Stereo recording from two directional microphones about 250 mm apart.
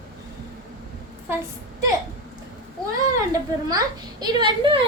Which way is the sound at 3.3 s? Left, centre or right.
Centre.